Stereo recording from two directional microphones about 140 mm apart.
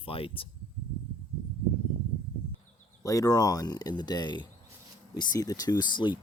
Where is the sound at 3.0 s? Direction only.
25° left (ahead or behind).